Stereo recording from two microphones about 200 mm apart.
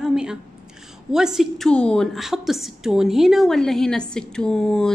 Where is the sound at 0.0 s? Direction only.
5° right (ahead or behind).